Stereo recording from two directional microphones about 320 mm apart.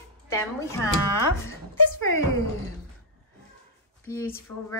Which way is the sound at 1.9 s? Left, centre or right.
Left.